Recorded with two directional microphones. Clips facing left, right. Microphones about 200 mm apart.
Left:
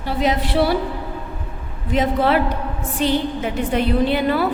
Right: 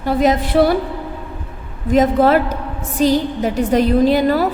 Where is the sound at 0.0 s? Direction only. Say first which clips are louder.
Right 5 dB; 45° right (ahead or behind).